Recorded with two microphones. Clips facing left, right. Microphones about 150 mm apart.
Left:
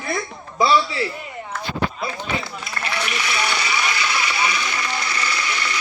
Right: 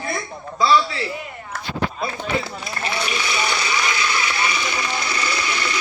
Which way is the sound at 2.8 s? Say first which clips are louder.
Right 1 dB; 30° right (ahead or behind).